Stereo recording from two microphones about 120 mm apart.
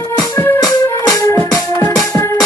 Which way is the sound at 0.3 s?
15° left (ahead or behind).